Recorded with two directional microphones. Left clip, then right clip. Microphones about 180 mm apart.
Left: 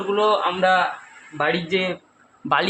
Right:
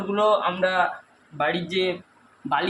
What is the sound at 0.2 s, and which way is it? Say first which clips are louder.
Speech: left 1 dB; 30° left (ahead or behind).